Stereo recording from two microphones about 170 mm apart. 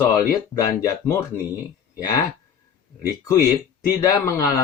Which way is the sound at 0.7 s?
20° left (ahead or behind).